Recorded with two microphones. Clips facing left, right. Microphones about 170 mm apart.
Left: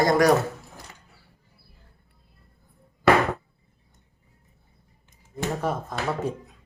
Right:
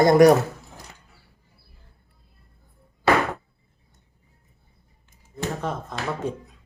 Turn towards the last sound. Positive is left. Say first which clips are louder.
# left 1 dB
turn(degrees=5)  # may be behind; listen again after turning